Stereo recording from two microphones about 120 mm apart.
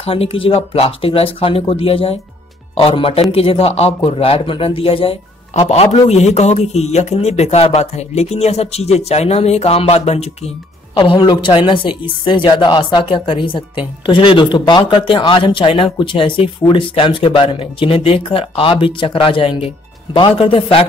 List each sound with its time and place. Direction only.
0.0 s a woman's voice: 55° left (ahead or behind)
11.0 s a woman's voice: 40° left (ahead or behind)